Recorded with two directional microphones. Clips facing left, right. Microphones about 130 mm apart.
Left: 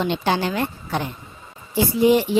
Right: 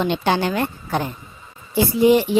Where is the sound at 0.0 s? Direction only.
60° right (ahead or behind).